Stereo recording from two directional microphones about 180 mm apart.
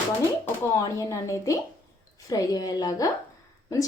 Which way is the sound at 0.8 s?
20° left (ahead or behind).